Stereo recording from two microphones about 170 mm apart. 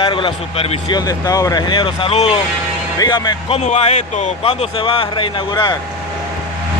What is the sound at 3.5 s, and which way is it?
Speech, 40° left (ahead or behind).